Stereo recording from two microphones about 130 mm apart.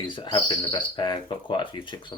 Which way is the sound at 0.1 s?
35° left (ahead or behind).